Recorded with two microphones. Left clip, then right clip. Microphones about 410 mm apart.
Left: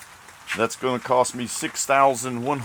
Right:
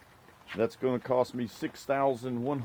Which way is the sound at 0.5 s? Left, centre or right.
Right.